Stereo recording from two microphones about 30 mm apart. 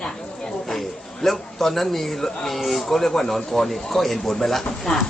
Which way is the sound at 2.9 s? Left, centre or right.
Centre.